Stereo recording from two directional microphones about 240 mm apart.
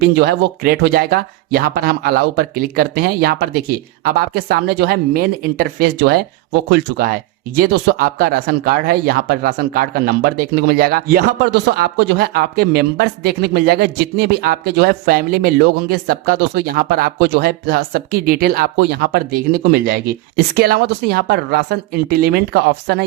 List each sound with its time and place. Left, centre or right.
0.2 s speech: right